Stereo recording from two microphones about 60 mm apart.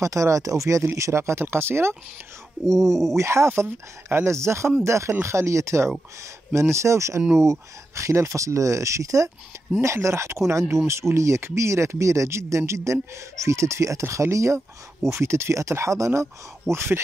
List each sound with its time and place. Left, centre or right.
0.0 s speech: right
0.8 s speech: right
2.6 s speech: right
3.4 s speech: right
10.0 s speech: right